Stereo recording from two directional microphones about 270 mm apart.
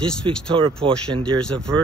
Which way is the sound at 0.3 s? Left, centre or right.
Centre.